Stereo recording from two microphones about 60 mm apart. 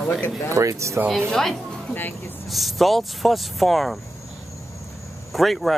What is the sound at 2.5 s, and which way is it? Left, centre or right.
Speech, centre.